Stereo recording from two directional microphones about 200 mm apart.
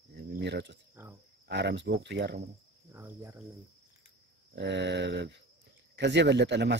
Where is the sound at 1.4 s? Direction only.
60° right (ahead or behind).